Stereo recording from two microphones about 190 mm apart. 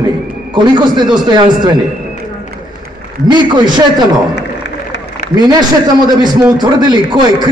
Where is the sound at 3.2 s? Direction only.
25° right (ahead or behind).